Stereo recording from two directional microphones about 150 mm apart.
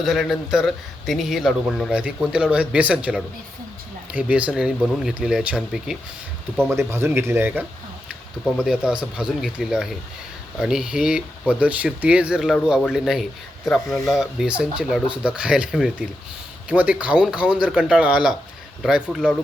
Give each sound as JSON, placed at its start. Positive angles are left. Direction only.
{"t": 0.0, "sound": "a man's voice", "side_deg": 0}
{"t": 6.6, "sound": "a man's voice", "side_deg": -15}